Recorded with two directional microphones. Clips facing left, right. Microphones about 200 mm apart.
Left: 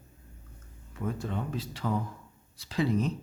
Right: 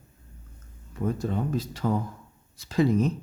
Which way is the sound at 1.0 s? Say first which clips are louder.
Right 6 dB; 40° right (ahead or behind).